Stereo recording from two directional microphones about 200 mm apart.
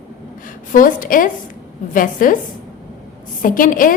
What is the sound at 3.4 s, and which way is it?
Speech, 45° left (ahead or behind).